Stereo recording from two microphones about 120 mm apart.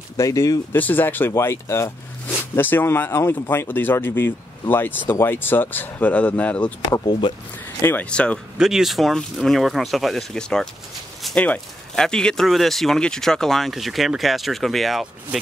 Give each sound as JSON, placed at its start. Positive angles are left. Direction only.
{"t": 0.2, "sound": "speech", "side_deg": 30}
{"t": 0.7, "sound": "speech", "side_deg": 15}
{"t": 7.1, "sound": "speech", "side_deg": 40}
{"t": 7.8, "sound": "speech", "side_deg": 15}
{"t": 8.5, "sound": "speech", "side_deg": -5}